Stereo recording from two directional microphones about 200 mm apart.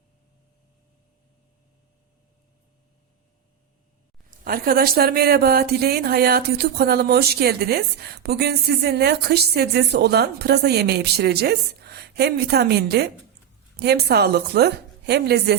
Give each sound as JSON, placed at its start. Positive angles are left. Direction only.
{"t": 4.3, "sound": "a woman's voice", "side_deg": -45}